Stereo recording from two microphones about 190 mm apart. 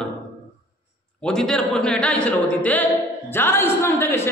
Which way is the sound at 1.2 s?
5° left (ahead or behind).